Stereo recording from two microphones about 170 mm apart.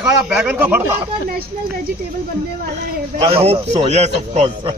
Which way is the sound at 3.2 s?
35° right (ahead or behind).